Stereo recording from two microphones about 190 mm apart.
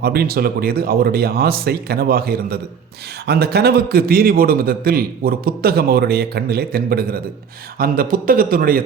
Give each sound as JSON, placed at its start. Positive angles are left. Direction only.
{"t": 0.0, "sound": "a man's voice", "side_deg": -55}